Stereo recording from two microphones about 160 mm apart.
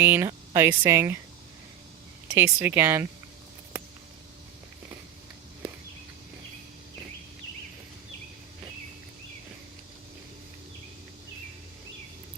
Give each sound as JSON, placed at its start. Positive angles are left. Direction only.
{"t": 0.0, "sound": "speech", "side_deg": -10}
{"t": 2.2, "sound": "speech", "side_deg": -15}